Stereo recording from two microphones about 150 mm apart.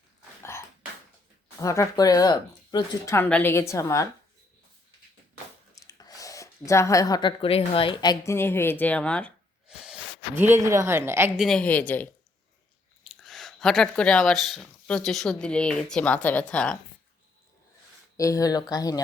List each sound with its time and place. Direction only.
1.6 s speech: 20° left (ahead or behind)
3.2 s speech: 10° left (ahead or behind)
5.7 s speech: 25° left (ahead or behind); by 9.3 s 10° left (ahead or behind)
9.6 s speech: 5° right (ahead or behind)
11.3 s a woman's voice: 5° left (ahead or behind)
13.1 s speech: centre (ahead or behind)
18.2 s speech: 20° left (ahead or behind)